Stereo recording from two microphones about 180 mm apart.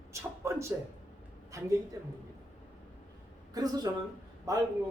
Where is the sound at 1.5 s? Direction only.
15° right (ahead or behind).